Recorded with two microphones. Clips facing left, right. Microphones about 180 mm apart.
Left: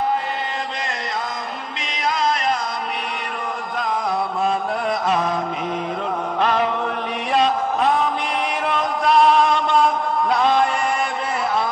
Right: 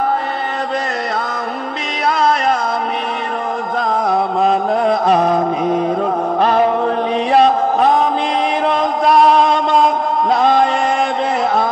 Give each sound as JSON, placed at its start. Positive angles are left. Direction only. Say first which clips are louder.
{"t": 2.0, "sound": "music", "louder": "right 6 dB", "side_deg": -55}
{"t": 4.1, "sound": "music", "louder": "right 8 dB", "side_deg": -45}
{"t": 7.3, "sound": "a sound", "louder": "right 6 dB", "side_deg": -50}
{"t": 10.3, "sound": "music", "louder": "right 5 dB", "side_deg": -45}